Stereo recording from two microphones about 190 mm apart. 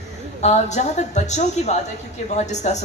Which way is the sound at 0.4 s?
35° left (ahead or behind).